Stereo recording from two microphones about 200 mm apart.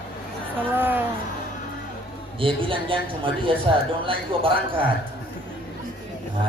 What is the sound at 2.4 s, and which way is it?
A woman's voice, 25° right (ahead or behind).